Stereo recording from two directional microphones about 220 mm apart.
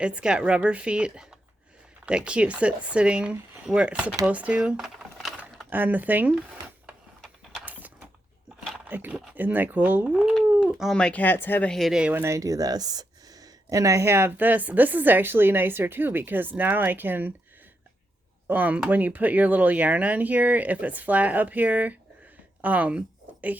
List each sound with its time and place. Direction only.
0.0 s speech: 5° right (ahead or behind)
7.2 s mechanisms: 5° right (ahead or behind)
8.7 s speech: 5° right (ahead or behind)
18.4 s speech: 5° right (ahead or behind)